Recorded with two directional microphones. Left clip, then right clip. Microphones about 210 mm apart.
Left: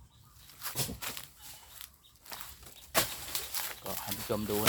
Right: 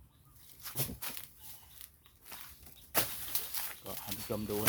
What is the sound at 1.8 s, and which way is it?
Walk, 10° left (ahead or behind).